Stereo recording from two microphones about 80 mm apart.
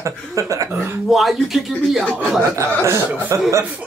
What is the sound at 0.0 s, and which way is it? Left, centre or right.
Speech, right.